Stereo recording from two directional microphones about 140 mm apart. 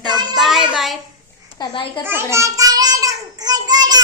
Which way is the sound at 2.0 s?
15° right (ahead or behind).